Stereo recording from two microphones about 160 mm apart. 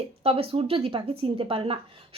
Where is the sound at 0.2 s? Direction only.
35° right (ahead or behind).